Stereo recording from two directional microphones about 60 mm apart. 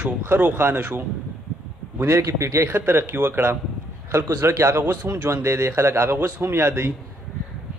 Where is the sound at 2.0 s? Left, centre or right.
Right.